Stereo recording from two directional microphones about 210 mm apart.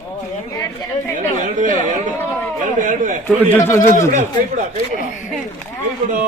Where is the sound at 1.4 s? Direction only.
35° right (ahead or behind).